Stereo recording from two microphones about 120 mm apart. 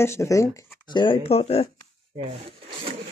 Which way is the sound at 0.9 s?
45° left (ahead or behind).